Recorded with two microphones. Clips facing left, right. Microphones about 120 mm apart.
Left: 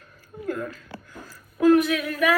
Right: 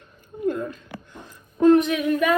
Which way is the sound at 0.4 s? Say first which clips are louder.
Right 5 dB; 20° right (ahead or behind).